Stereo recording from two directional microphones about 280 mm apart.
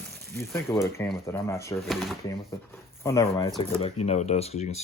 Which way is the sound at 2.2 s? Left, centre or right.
Centre.